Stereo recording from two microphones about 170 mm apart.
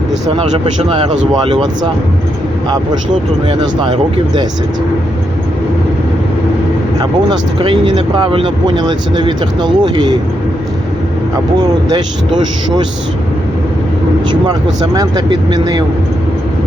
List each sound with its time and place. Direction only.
0.3 s a man's voice: 35° right (ahead or behind)
3.5 s speech: 25° right (ahead or behind)
7.0 s speech: 25° right (ahead or behind)
11.5 s speech: 25° right (ahead or behind)
14.9 s speech: 25° right (ahead or behind)